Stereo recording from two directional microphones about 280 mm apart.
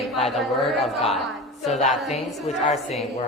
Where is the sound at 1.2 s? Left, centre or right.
Centre.